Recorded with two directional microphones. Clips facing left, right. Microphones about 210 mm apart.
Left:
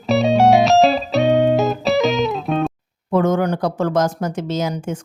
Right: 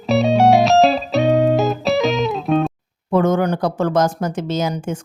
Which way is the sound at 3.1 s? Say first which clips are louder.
Right 1 dB; 30° right (ahead or behind).